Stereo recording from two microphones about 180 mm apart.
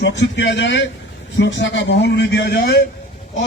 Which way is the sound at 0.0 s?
80° left.